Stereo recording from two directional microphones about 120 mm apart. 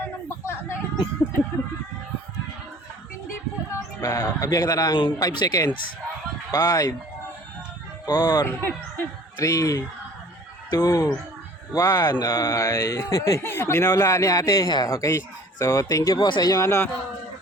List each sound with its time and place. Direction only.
0.0 s a sound: 20° left (ahead or behind)
3.8 s speech: 25° left (ahead or behind)
8.0 s speech: 35° left (ahead or behind)
16.1 s speech: 40° left (ahead or behind); by 16.9 s 25° left (ahead or behind)